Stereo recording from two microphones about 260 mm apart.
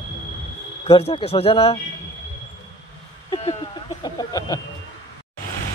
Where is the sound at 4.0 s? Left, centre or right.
Centre.